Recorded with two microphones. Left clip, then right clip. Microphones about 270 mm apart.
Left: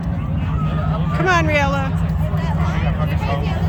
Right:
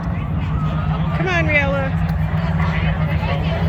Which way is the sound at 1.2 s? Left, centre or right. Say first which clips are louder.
Left 2 dB; centre.